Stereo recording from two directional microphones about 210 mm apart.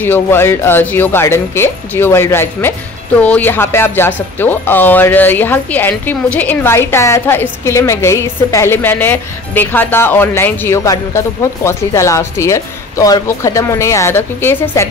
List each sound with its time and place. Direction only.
0.0 s speech: 10° left (ahead or behind)